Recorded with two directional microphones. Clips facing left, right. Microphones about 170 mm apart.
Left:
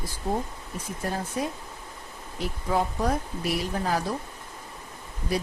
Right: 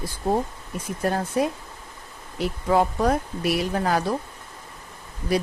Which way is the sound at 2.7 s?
70° right (ahead or behind).